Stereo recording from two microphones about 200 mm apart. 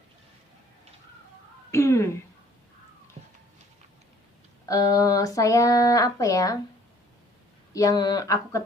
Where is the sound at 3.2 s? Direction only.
35° right (ahead or behind).